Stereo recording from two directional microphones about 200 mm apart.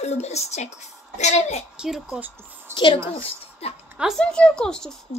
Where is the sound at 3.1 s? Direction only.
30° left (ahead or behind).